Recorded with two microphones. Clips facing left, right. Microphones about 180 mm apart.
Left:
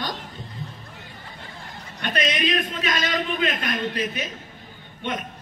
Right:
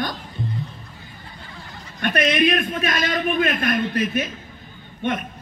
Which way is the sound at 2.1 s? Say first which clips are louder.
Right 5 dB; 45° right (ahead or behind).